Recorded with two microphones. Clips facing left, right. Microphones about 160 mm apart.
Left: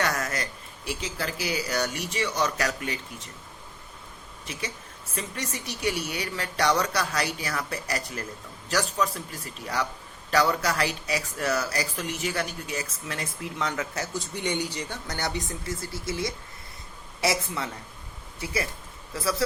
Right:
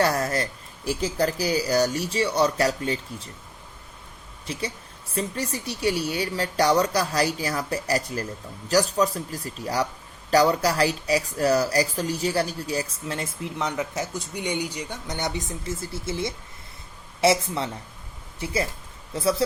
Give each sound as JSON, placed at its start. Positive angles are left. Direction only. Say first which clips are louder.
{"t": 0.0, "sound": "speech", "louder": "right 6 dB", "side_deg": -35}
{"t": 5.1, "sound": "a woman's voice", "louder": "right 6 dB", "side_deg": -35}